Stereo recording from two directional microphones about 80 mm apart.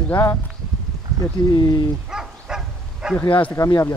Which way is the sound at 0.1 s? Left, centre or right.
Left.